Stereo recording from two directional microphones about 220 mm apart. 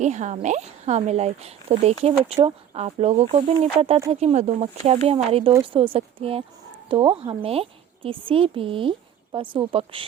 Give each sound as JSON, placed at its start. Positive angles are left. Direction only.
{"t": 0.0, "sound": "speech", "side_deg": -30}